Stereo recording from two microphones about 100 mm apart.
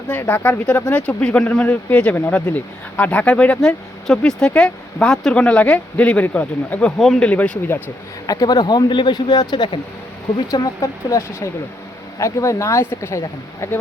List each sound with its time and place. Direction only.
0.1 s speech: 15° left (ahead or behind)
7.0 s speech: centre (ahead or behind)
7.3 s speech: 10° left (ahead or behind)
8.3 s speech: 40° left (ahead or behind)
10.5 s speech: 35° left (ahead or behind)